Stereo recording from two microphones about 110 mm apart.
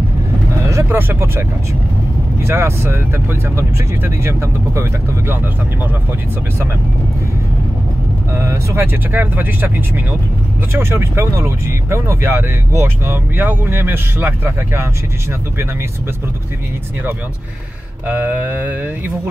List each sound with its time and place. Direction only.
0.7 s speech: 25° right (ahead or behind)
2.4 s speech: 25° right (ahead or behind)
8.4 s speech: 25° right (ahead or behind)
18.0 s speech: 15° right (ahead or behind)